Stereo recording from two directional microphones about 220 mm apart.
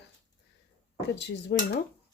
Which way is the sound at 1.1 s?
50° left (ahead or behind).